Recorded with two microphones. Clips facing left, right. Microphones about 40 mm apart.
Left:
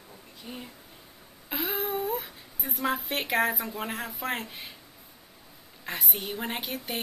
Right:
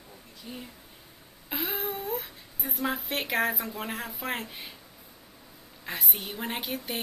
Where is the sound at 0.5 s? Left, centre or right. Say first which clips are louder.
Even; centre.